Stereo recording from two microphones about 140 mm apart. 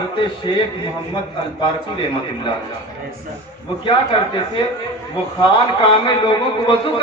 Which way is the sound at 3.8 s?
35° left (ahead or behind).